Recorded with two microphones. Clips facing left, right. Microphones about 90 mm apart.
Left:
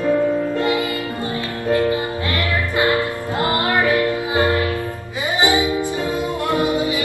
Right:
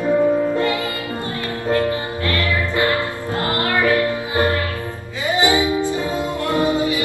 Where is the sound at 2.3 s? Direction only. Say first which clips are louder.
Right 1 dB; 20° left (ahead or behind).